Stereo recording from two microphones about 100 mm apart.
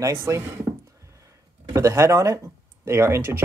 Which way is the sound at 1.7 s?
30° right (ahead or behind).